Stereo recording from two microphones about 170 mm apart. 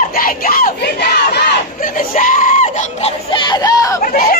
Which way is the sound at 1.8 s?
50° left (ahead or behind).